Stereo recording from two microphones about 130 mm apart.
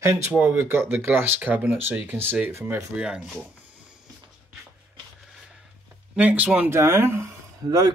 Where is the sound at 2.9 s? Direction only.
5° right (ahead or behind).